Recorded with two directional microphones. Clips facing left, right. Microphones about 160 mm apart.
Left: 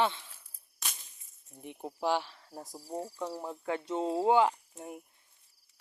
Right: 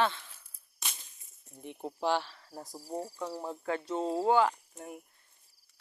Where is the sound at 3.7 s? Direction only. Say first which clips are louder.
Even; 20° left (ahead or behind).